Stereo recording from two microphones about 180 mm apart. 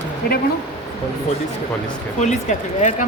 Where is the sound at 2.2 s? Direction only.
40° left (ahead or behind).